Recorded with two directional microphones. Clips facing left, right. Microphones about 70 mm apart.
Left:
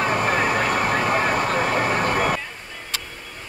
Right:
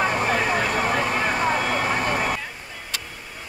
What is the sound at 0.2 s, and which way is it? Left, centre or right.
Vehicle, left.